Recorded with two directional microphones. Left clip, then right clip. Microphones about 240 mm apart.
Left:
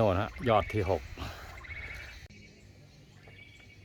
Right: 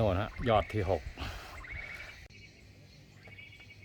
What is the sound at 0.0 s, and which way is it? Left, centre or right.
Speech, centre.